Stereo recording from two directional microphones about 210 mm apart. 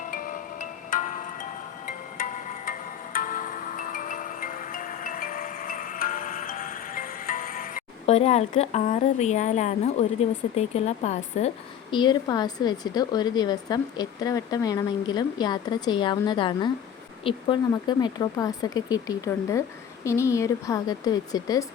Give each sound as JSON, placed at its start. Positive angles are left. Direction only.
{"t": 0.0, "sound": "marimba", "side_deg": 40}
{"t": 1.9, "sound": "music", "side_deg": 40}
{"t": 10.5, "sound": "a woman's voice", "side_deg": 30}